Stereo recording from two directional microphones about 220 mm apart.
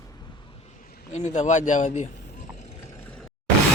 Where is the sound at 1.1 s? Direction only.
30° left (ahead or behind).